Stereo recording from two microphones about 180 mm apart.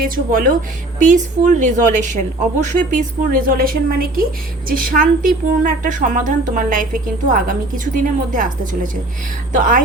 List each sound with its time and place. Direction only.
0.0 s a woman's voice: 50° right (ahead or behind)